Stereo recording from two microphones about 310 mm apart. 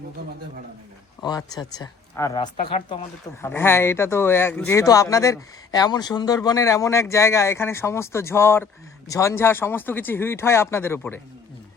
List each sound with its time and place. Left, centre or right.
1.2 s speech: centre